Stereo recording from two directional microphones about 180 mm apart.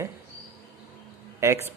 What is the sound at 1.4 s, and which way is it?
Speech, 15° right (ahead or behind).